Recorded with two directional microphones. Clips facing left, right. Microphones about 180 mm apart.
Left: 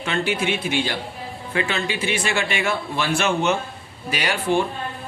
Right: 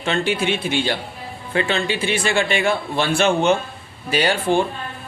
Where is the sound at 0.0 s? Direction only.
30° right (ahead or behind).